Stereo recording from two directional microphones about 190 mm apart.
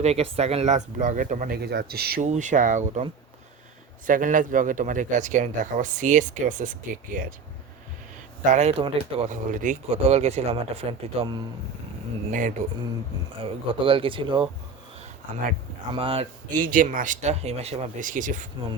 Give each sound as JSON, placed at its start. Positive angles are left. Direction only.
{"t": 0.0, "sound": "speech", "side_deg": -35}
{"t": 2.2, "sound": "speech", "side_deg": -40}
{"t": 8.4, "sound": "speech", "side_deg": -40}
{"t": 12.3, "sound": "speech", "side_deg": -45}
{"t": 13.4, "sound": "speech", "side_deg": -30}
{"t": 15.9, "sound": "speech", "side_deg": -30}
{"t": 16.6, "sound": "speech", "side_deg": -45}